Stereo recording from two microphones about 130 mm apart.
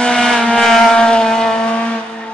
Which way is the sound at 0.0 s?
5° left (ahead or behind).